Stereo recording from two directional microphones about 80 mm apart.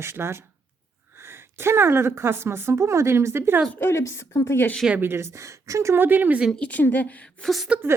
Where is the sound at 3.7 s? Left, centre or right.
Left.